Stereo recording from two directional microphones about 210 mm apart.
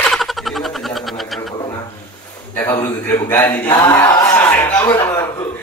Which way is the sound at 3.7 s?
15° left (ahead or behind).